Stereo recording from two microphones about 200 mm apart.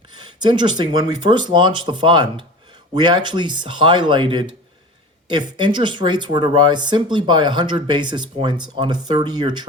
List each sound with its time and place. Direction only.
0.1 s speech: 20° right (ahead or behind)